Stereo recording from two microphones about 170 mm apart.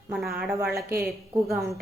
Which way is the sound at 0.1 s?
Centre (ahead or behind).